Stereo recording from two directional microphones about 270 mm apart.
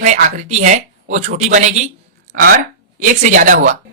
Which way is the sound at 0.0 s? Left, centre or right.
Right.